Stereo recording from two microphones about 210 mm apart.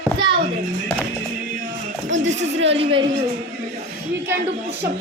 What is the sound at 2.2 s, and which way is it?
Speech, 35° right (ahead or behind).